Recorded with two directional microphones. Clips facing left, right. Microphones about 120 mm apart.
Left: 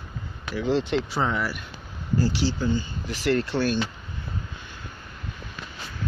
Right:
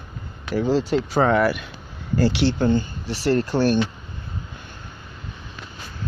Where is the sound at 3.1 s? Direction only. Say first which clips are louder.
Right 3 dB; 35° right (ahead or behind).